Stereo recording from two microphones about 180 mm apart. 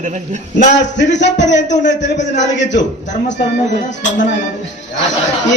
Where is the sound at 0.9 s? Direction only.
75° left (ahead or behind).